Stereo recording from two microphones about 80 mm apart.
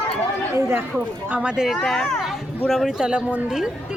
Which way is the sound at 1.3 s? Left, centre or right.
Centre.